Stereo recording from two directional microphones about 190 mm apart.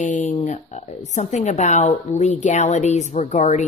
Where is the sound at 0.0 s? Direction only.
40° left (ahead or behind).